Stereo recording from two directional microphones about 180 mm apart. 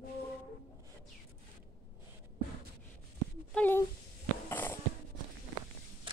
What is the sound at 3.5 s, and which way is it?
Speech, 10° left (ahead or behind).